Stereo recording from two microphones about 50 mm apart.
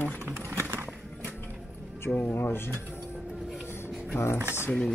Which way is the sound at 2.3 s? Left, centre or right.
Left.